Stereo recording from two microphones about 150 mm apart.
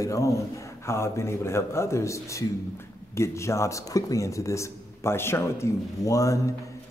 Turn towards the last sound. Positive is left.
turn(degrees=20)  # may be behind; listen again after turning